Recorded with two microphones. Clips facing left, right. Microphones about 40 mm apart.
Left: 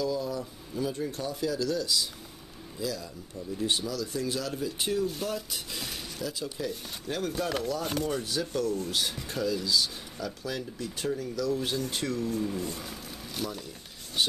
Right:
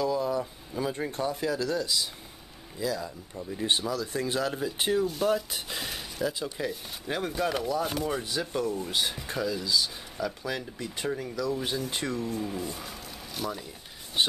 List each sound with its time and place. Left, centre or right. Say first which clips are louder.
0.0 s speech: right 3 dB; right; by 8.2 s centre
8.2 s speech: even; centre
12.3 s speech: left 1 dB; centre
14.2 s speech: right 2 dB; right